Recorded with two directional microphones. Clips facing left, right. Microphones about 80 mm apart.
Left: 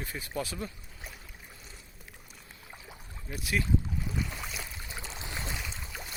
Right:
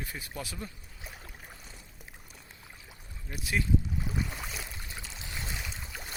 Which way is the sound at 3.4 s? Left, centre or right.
Right.